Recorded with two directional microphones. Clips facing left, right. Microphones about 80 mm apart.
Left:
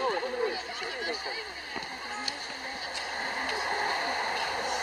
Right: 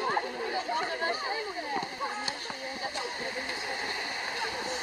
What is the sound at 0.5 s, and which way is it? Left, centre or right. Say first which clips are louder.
Speech: right 5 dB; right.